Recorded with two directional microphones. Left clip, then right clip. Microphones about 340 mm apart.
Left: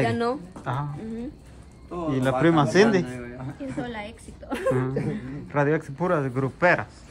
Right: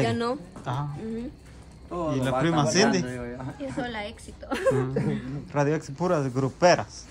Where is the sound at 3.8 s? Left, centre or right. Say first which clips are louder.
Right 2 dB; centre.